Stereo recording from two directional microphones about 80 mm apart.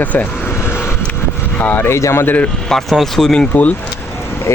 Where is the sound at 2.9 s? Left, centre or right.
Centre.